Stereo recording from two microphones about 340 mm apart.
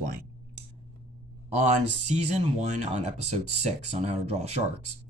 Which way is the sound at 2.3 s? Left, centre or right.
Centre.